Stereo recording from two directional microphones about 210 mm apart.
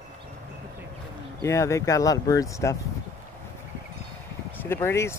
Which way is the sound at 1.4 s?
15° left (ahead or behind).